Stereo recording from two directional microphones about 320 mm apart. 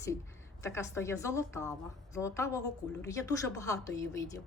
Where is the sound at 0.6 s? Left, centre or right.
Centre.